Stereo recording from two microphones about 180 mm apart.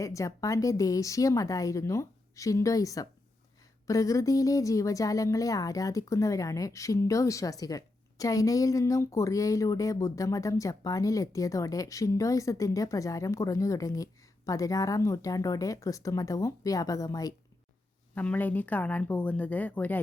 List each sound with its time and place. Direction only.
0.0 s a woman's voice: 15° left (ahead or behind)
18.1 s a woman's voice: 10° left (ahead or behind)